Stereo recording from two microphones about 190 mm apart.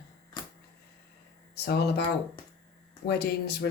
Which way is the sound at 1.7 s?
55° left (ahead or behind).